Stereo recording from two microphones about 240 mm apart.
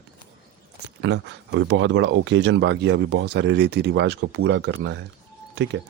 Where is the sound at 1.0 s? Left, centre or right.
Right.